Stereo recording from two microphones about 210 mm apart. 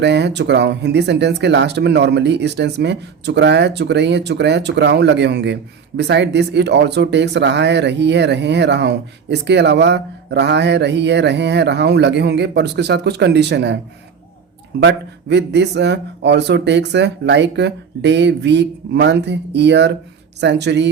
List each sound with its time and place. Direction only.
0.0 s speech: 55° right (ahead or behind)
14.8 s speech: 55° right (ahead or behind)